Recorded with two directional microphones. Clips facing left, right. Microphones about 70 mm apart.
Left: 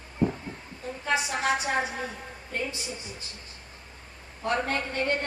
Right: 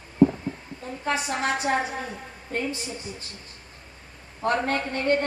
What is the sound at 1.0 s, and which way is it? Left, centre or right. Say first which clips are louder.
A woman's voice: right 1 dB; right.